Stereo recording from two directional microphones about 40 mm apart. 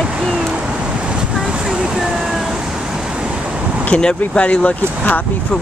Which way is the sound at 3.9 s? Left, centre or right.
Left.